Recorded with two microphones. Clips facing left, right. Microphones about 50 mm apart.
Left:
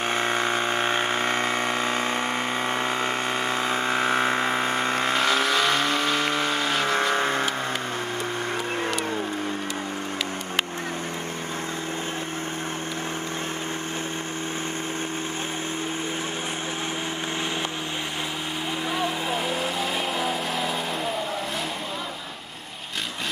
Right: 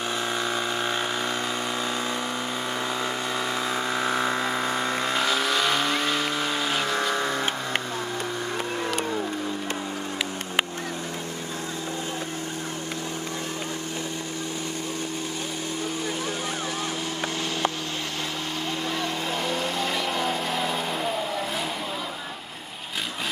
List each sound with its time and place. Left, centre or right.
0.0 s vehicle: left
5.2 s vehicle: centre
6.9 s vehicle: centre
7.2 s vehicle: left
18.9 s vehicle: centre